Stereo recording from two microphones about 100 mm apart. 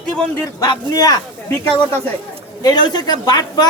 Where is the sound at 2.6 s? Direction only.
45° left (ahead or behind).